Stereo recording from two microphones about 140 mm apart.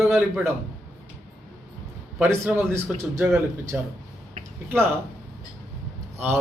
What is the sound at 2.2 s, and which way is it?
Speech, 15° right (ahead or behind).